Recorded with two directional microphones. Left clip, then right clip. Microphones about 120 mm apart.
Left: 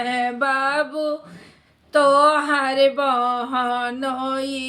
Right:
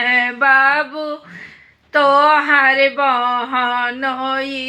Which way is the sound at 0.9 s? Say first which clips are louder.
Even; 40° left (ahead or behind).